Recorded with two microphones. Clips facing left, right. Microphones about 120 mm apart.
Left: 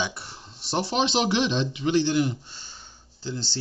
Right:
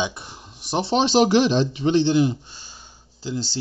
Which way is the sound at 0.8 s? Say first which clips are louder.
Right 7 dB; 35° right (ahead or behind).